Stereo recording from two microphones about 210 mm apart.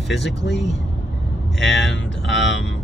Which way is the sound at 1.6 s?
Centre (ahead or behind).